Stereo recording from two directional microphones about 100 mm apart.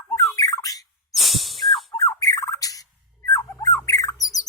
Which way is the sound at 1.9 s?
35° left (ahead or behind).